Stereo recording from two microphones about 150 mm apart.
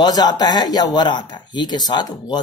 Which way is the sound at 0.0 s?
30° left (ahead or behind).